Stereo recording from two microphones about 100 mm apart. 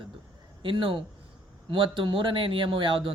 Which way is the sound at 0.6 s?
60° right (ahead or behind).